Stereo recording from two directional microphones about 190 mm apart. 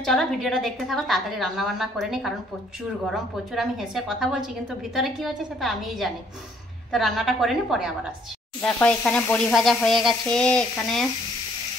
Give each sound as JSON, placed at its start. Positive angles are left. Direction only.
{"t": 0.0, "sound": "a woman's voice", "side_deg": 0}
{"t": 8.5, "sound": "a woman's voice", "side_deg": 10}